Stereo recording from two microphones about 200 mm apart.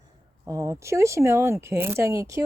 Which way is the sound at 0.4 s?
15° right (ahead or behind).